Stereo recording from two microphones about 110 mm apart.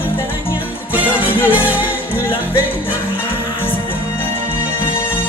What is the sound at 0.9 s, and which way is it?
Music, 15° right (ahead or behind).